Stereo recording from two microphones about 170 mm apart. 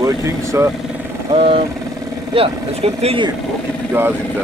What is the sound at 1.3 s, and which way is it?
Speech, 35° right (ahead or behind).